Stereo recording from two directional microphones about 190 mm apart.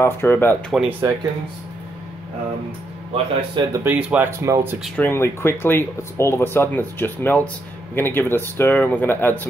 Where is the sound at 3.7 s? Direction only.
10° right (ahead or behind).